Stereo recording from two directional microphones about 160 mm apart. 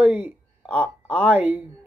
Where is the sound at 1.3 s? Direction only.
10° right (ahead or behind).